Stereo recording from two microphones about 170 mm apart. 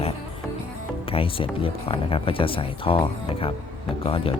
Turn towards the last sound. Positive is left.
turn(degrees=35)  # may be behind; listen again after turning